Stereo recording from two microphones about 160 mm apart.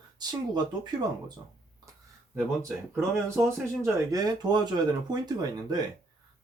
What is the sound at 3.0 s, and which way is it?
A man's voice, 15° right (ahead or behind).